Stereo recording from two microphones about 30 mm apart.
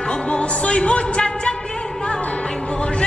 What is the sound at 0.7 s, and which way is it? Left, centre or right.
Music, left.